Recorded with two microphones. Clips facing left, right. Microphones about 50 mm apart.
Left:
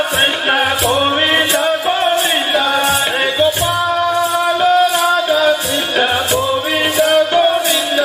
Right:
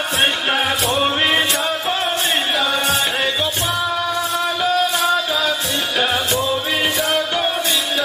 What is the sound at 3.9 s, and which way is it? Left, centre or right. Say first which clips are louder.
Music: left 6 dB; centre.